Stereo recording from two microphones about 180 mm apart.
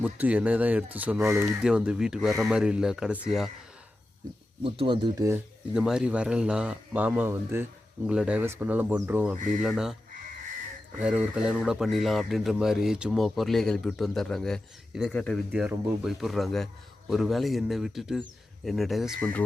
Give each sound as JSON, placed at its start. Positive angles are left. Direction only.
{"t": 0.0, "sound": "speech", "side_deg": -10}
{"t": 4.6, "sound": "speech", "side_deg": -30}
{"t": 5.7, "sound": "speech", "side_deg": -5}
{"t": 11.0, "sound": "speech", "side_deg": -5}